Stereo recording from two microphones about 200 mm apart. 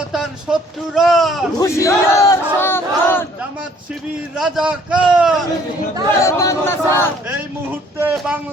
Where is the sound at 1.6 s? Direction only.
15° left (ahead or behind).